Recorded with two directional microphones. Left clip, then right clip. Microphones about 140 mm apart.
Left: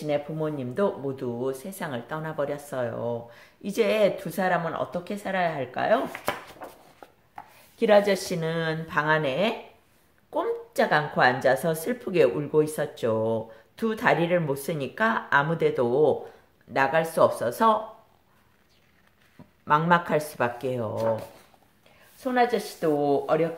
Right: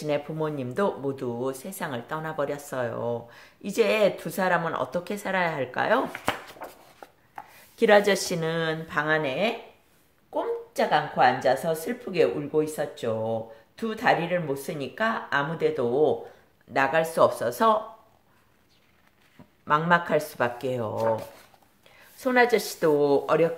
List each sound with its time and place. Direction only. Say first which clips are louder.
0.0 s speech: even; 25° right (ahead or behind)
6.6 s a sound: right 1 dB; 15° right (ahead or behind)
7.7 s speech: right 1 dB; 35° right (ahead or behind); by 8.7 s 15° right (ahead or behind)
8.8 s speech: left 3 dB; 5° left (ahead or behind)
10.3 s speech: left 2 dB; 40° left (ahead or behind); by 16.2 s 25° left (ahead or behind)
16.7 s speech: even; centre (ahead or behind)
19.6 s speech: left 1 dB; centre (ahead or behind); by 21.2 s 15° right (ahead or behind)
22.2 s speech: right 2 dB; 50° right (ahead or behind)